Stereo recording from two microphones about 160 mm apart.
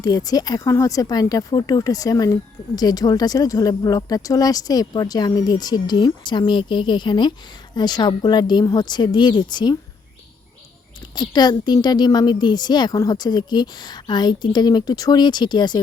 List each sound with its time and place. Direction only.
0.0 s speech: 25° left (ahead or behind)
11.1 s speech: 25° left (ahead or behind)